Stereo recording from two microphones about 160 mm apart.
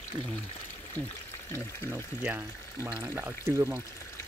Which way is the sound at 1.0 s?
10° left (ahead or behind).